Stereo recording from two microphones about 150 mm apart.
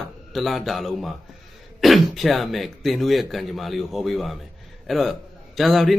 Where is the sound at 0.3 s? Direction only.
Centre (ahead or behind).